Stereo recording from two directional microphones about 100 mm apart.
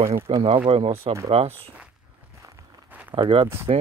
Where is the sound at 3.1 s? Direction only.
60° right (ahead or behind).